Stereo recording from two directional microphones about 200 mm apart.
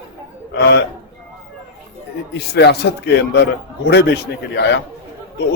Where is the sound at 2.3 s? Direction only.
55° left (ahead or behind).